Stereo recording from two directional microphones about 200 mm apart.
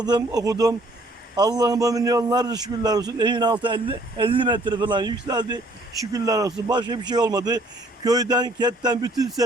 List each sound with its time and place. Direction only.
0.0 s a man's voice: 20° right (ahead or behind)